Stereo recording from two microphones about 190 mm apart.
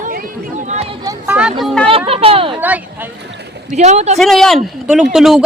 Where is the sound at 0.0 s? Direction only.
50° right (ahead or behind).